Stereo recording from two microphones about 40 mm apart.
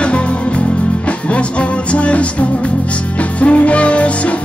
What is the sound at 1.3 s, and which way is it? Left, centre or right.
Music, left.